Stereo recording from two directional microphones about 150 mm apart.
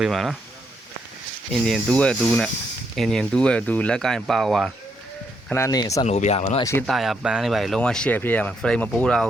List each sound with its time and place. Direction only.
0.0 s speech: centre (ahead or behind)
1.5 s speech: 5° left (ahead or behind)
5.5 s speech: 20° left (ahead or behind)
6.1 s speech: 50° left (ahead or behind)
6.6 s speech: 20° left (ahead or behind)
6.8 s speech: centre (ahead or behind)